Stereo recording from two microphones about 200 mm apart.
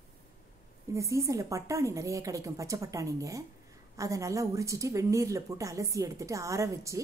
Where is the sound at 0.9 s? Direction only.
15° right (ahead or behind).